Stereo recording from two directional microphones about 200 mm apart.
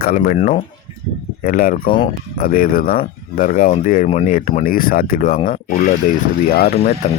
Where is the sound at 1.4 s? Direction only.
45° left (ahead or behind).